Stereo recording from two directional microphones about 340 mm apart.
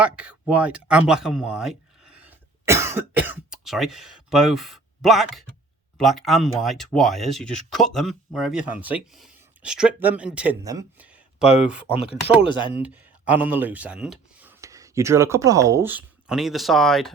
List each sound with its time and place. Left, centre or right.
0.0 s speech: centre
12.4 s speech: centre
12.7 s speech: centre